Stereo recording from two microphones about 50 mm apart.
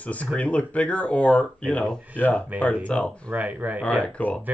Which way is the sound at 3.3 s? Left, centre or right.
Right.